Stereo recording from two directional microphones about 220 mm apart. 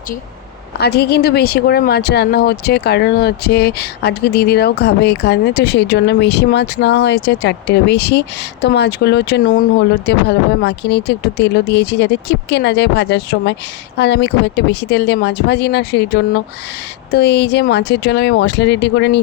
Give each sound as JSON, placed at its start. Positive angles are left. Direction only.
{"t": 0.8, "sound": "speech", "side_deg": 45}